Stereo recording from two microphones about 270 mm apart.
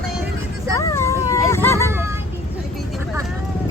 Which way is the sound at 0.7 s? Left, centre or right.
Centre.